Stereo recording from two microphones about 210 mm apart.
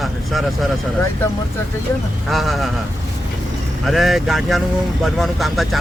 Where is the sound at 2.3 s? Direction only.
Centre (ahead or behind).